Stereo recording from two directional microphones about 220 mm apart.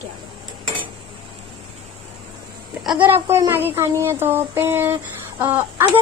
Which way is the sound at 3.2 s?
10° right (ahead or behind).